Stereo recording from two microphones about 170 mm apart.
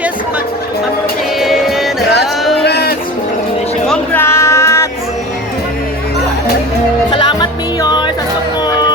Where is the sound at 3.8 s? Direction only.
10° left (ahead or behind).